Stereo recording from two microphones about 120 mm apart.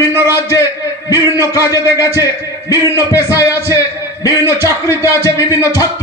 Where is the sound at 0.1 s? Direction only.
20° right (ahead or behind).